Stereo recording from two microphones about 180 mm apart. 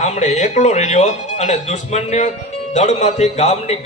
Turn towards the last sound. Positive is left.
turn(degrees=35)  # may be behind; listen again after turning